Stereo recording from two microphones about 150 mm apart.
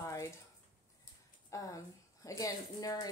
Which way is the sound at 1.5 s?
20° left (ahead or behind).